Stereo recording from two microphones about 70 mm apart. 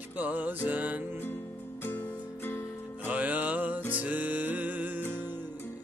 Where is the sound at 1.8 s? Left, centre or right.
Left.